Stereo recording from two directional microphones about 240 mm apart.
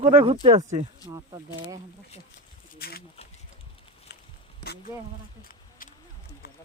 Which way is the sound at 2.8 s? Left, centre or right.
Left.